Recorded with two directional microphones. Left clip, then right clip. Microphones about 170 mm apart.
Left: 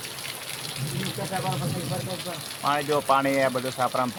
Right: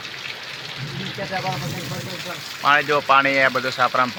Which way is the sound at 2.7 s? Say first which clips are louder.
Right 6 dB; 5° left (ahead or behind).